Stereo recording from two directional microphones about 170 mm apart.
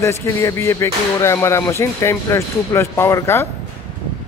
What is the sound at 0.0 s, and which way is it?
Speech, 15° left (ahead or behind).